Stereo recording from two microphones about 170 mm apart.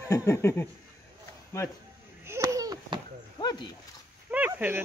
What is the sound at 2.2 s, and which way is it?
Babbling, 15° right (ahead or behind).